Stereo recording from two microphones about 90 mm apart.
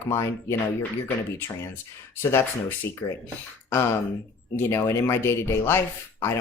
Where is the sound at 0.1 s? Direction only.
30° left (ahead or behind).